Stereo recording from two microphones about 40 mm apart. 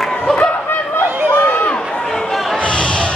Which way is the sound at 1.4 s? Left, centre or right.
Left.